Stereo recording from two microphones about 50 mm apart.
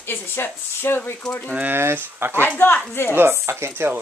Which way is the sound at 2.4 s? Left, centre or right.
Left.